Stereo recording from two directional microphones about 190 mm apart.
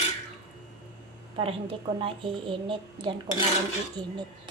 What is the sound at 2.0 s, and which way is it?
A woman's voice, 25° right (ahead or behind).